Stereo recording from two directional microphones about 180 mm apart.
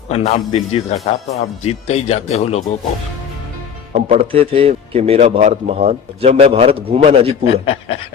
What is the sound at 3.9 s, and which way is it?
A man's voice, 40° right (ahead or behind).